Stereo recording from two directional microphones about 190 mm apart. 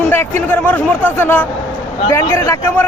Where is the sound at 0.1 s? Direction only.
10° left (ahead or behind).